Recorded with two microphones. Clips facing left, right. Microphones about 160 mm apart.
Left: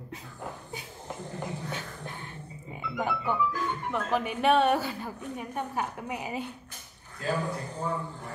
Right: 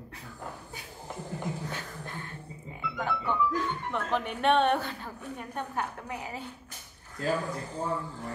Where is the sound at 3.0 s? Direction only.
10° left (ahead or behind).